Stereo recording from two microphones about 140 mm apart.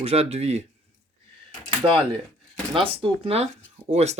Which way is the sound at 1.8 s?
40° right (ahead or behind).